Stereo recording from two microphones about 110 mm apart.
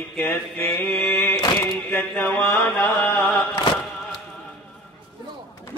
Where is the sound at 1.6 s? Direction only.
15° left (ahead or behind).